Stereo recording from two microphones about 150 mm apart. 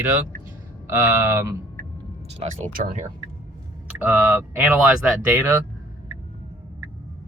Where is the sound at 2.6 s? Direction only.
65° right (ahead or behind).